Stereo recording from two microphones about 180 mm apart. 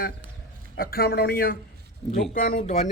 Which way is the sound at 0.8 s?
55° left (ahead or behind).